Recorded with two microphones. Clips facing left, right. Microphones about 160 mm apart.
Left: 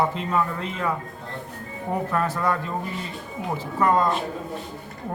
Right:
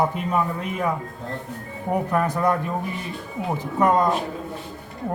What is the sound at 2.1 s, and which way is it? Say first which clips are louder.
Speech: right 3 dB; 15° right (ahead or behind).